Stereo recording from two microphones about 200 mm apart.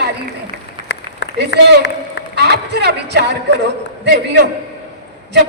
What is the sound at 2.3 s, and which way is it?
A man's voice, 55° right (ahead or behind).